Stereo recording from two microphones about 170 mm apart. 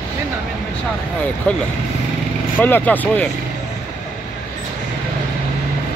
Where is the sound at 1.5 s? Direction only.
10° left (ahead or behind).